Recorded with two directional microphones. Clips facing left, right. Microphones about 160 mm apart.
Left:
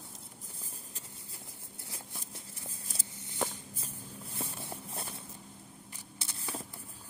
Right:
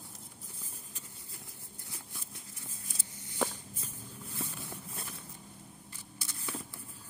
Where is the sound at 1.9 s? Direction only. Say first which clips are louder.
Left 3 dB; 30° left (ahead or behind).